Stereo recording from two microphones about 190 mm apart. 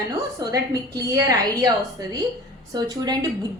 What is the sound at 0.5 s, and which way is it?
A woman's voice, 20° right (ahead or behind).